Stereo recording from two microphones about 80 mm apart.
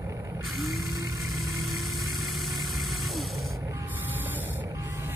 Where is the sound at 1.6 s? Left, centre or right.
Centre.